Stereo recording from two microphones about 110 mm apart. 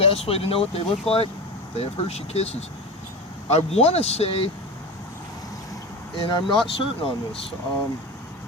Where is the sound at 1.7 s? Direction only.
75° left (ahead or behind).